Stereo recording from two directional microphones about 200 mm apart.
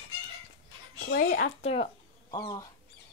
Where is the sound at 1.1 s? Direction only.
45° left (ahead or behind).